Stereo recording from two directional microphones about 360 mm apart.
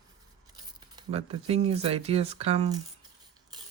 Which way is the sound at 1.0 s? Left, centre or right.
Centre.